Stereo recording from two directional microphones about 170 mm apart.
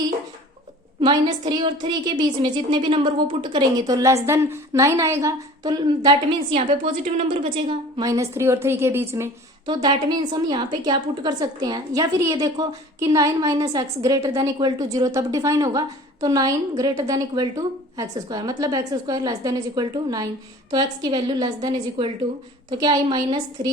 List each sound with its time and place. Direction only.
1.0 s a woman's voice: 25° right (ahead or behind)
6.5 s a woman's voice: 35° right (ahead or behind); by 9.3 s 15° right (ahead or behind)
9.6 s a woman's voice: 25° right (ahead or behind)